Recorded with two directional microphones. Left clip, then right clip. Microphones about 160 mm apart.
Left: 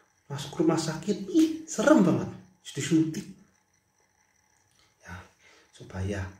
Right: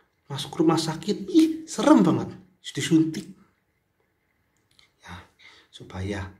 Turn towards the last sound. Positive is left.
turn(degrees=-15)  # may be behind; listen again after turning